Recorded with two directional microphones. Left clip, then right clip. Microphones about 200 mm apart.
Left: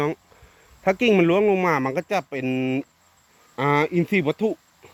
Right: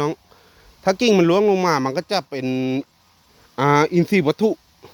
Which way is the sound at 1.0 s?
20° right (ahead or behind).